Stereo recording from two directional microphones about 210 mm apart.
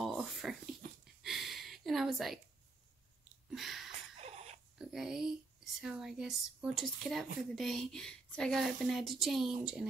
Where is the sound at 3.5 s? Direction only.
Centre (ahead or behind).